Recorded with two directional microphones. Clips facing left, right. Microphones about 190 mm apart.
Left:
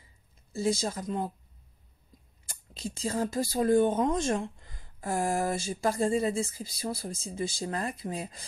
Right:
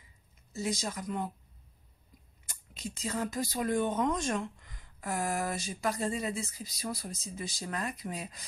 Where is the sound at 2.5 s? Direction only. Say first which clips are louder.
Left 4 dB; 30° left (ahead or behind).